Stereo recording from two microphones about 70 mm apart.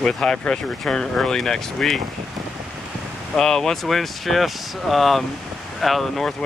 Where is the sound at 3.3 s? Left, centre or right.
Centre.